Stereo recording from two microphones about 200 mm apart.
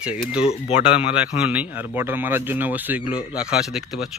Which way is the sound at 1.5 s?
10° right (ahead or behind).